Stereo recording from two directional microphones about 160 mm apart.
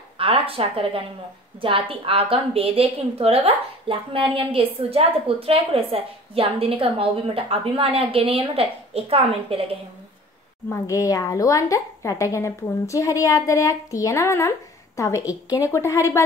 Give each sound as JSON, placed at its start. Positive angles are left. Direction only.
{"t": 0.2, "sound": "a woman's voice", "side_deg": -35}
{"t": 10.7, "sound": "a woman's voice", "side_deg": 20}